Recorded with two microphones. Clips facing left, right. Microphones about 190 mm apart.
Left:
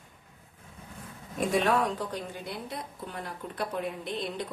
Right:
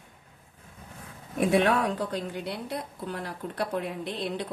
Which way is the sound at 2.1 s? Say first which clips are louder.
Right 4 dB; 65° right (ahead or behind).